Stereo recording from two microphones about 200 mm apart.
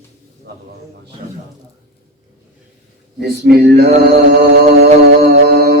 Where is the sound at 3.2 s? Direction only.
50° right (ahead or behind).